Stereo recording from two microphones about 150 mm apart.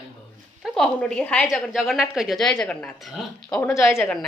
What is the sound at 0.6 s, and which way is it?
A woman's voice, 5° left (ahead or behind).